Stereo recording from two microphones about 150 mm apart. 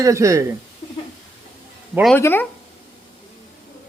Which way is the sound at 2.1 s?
15° left (ahead or behind).